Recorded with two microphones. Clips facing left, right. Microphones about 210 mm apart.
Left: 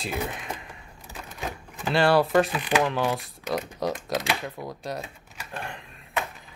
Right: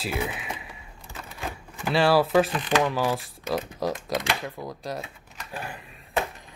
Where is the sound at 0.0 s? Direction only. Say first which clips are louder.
Right 1 dB; 5° right (ahead or behind).